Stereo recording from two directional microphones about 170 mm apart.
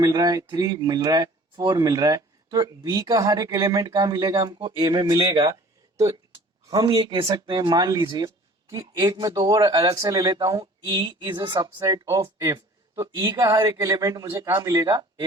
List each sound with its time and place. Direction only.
0.0 s speech: 20° right (ahead or behind)